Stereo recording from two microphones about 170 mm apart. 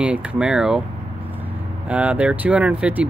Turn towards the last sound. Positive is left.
turn(degrees=-10)  # may be behind; listen again after turning